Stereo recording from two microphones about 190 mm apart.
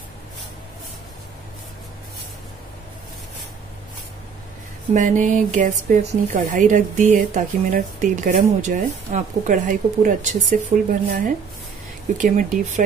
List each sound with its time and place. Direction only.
4.9 s a woman's voice: 40° right (ahead or behind)